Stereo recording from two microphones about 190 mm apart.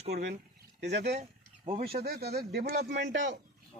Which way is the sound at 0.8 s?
65° right (ahead or behind).